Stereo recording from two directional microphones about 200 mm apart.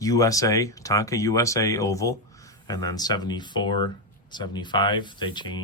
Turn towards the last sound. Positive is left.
turn(degrees=25)  # may be behind; listen again after turning